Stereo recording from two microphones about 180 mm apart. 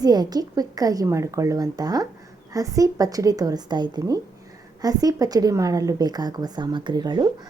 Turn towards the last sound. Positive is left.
turn(degrees=-20)  # may be behind; listen again after turning